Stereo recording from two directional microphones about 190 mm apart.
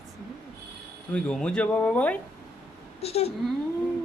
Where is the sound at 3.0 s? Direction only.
30° left (ahead or behind).